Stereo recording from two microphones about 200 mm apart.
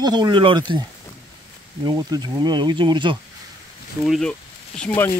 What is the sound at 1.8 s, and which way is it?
Speech, 20° right (ahead or behind).